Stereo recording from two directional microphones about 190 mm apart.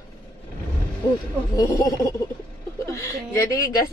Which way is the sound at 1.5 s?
15° left (ahead or behind).